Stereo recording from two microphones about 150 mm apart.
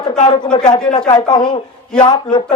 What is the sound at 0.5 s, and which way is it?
Speech, 30° left (ahead or behind).